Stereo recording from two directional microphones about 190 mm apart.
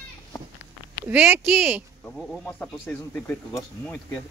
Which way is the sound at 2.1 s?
Centre (ahead or behind).